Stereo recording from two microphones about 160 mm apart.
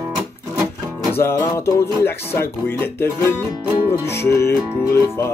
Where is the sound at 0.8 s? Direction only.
20° right (ahead or behind).